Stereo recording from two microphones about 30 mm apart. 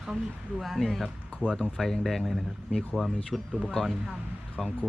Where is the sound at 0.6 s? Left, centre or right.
Centre.